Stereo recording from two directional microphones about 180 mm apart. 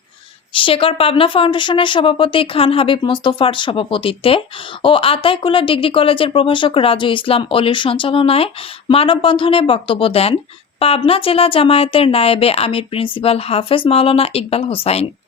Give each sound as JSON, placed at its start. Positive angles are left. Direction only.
{"t": 0.5, "sound": "speech", "side_deg": 30}